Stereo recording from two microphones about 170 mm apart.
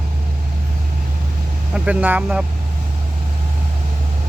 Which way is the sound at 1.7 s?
5° right (ahead or behind).